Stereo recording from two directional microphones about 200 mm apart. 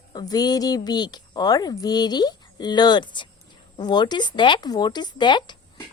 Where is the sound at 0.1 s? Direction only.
20° left (ahead or behind).